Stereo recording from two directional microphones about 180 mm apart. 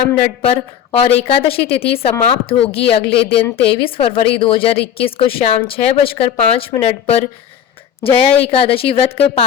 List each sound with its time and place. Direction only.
0.4 s a woman's voice: 30° left (ahead or behind)